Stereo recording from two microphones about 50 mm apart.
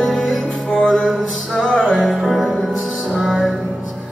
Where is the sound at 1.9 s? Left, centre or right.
Centre.